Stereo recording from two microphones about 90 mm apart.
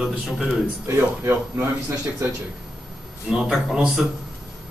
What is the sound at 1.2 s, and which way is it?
Speech, 25° right (ahead or behind).